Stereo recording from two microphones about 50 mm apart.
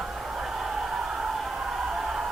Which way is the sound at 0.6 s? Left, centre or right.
Centre.